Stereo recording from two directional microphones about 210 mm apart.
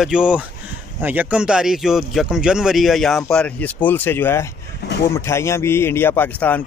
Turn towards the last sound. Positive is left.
turn(degrees=10)  # may be behind; listen again after turning